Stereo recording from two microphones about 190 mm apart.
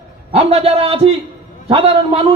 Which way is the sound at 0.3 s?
30° right (ahead or behind).